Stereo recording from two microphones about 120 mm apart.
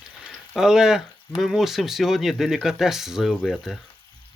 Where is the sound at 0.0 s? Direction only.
5° right (ahead or behind).